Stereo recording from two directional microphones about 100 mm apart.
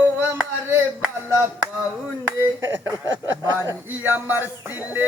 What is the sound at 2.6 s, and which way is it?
A man's voice, 25° right (ahead or behind).